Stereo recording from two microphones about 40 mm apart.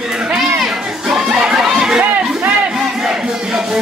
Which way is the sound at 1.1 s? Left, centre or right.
Centre.